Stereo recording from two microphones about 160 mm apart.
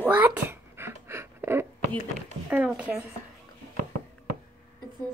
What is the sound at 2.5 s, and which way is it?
Speech, 10° right (ahead or behind).